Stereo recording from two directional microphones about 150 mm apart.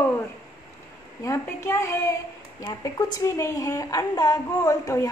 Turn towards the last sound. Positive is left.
turn(degrees=20)  # may be behind; listen again after turning